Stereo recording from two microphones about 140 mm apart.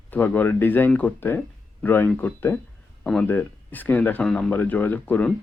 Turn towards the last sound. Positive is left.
turn(degrees=10)  # may be behind; listen again after turning